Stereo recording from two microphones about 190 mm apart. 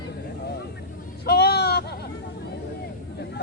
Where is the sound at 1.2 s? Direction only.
55° left (ahead or behind).